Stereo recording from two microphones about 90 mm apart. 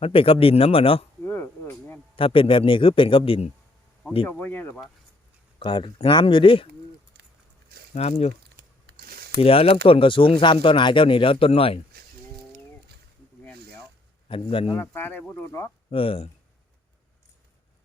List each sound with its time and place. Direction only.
0.0 s speech: 90° left
1.2 s a sound: 20° left (ahead or behind)
2.1 s speech: 80° left
4.3 s speech: 20° left (ahead or behind)
5.5 s speech: 70° left (ahead or behind)
9.4 s speech: 90° left
14.3 s speech: 90° left
14.8 s speech: 20° left (ahead or behind)
15.9 s speech: 90° left